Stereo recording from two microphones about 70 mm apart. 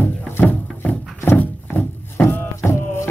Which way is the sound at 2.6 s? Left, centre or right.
Left.